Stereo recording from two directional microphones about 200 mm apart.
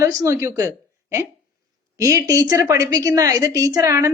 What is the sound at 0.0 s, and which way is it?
Speech, 15° right (ahead or behind).